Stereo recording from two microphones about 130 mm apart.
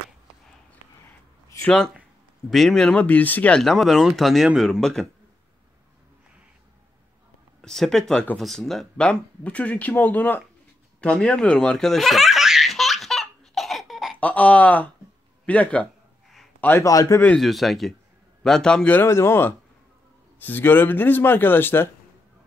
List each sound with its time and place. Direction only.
1.0 s a sound: 20° left (ahead or behind)
2.5 s speech: centre (ahead or behind)
7.6 s speech: 5° left (ahead or behind)
11.0 s baby laughter: 10° left (ahead or behind)
14.1 s speech: 10° left (ahead or behind)
16.6 s a man's voice: 20° left (ahead or behind)
17.4 s speech: centre (ahead or behind); by 21.9 s 15° left (ahead or behind)